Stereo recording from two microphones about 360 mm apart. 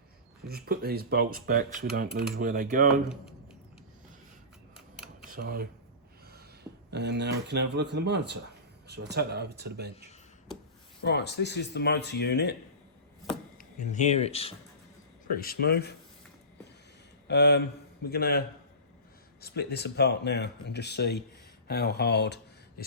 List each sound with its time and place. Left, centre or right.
0.4 s speech: right
5.2 s a sound: right
6.9 s speech: right
11.0 s speech: left
13.6 s speech: left
17.2 s speech: left